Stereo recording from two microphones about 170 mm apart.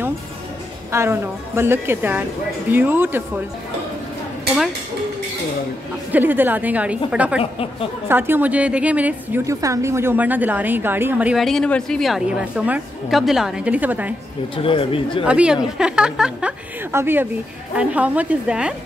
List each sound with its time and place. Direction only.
0.9 s a woman's voice: 15° right (ahead or behind)
6.1 s a woman's voice: 10° right (ahead or behind)
14.6 s speech: 35° left (ahead or behind)
15.2 s a woman's voice: 5° right (ahead or behind)